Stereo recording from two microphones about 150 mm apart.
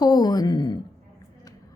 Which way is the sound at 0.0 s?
25° left (ahead or behind).